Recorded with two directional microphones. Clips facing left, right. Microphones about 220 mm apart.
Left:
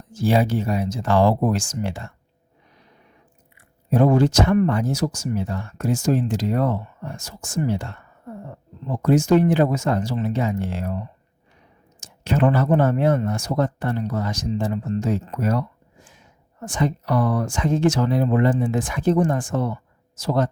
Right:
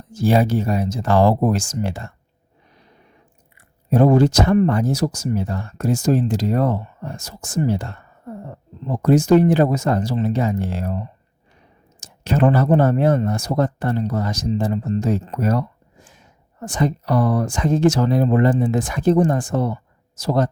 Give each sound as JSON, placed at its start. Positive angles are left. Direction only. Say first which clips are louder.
{"t": 0.1, "sound": "speech", "louder": "right 2 dB", "side_deg": -40}
{"t": 3.8, "sound": "speech", "louder": "right 3 dB", "side_deg": -35}